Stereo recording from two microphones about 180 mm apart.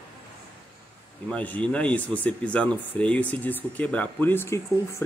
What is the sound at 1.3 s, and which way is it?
Speech, 10° left (ahead or behind).